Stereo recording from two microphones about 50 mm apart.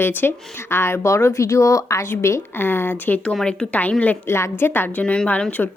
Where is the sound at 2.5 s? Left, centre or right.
Left.